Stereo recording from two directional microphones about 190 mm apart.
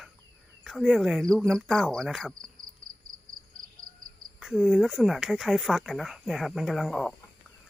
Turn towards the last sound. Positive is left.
turn(degrees=0)  # may be behind; listen again after turning